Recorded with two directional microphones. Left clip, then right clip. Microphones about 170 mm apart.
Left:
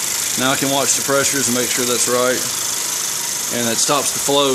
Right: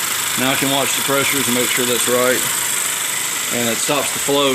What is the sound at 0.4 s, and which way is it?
Speech, centre (ahead or behind).